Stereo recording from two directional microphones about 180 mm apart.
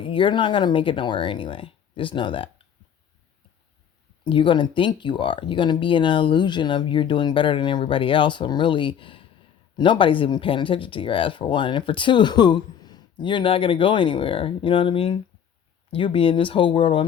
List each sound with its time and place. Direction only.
0.0 s speech: 30° left (ahead or behind)
4.2 s speech: 25° left (ahead or behind)